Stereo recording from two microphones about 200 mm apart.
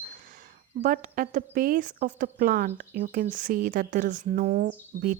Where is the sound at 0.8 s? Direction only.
45° right (ahead or behind).